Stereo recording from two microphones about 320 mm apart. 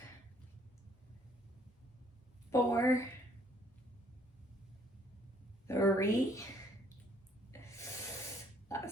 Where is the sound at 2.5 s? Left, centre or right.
Centre.